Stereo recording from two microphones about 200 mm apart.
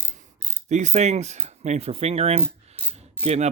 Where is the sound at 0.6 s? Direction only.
35° right (ahead or behind).